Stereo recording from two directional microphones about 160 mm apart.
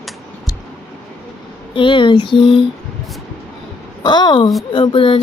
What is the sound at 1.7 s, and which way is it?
Speech, 30° left (ahead or behind).